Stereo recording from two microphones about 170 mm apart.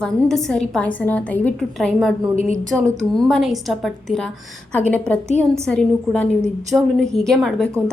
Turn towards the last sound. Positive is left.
turn(degrees=5)  # may be behind; listen again after turning